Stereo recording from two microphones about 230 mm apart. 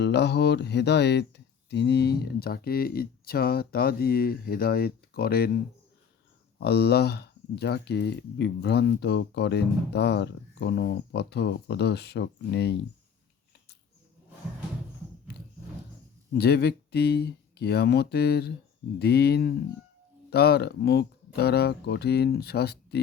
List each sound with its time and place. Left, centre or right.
0.0 s speech: left
6.6 s speech: left
16.3 s speech: left